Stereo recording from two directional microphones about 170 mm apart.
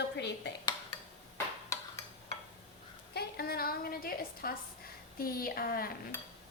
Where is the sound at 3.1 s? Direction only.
65° left (ahead or behind).